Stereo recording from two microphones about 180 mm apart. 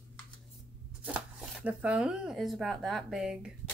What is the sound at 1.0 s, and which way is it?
Speech, 5° right (ahead or behind).